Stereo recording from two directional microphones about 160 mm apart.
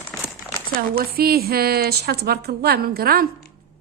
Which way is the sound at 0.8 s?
65° right (ahead or behind).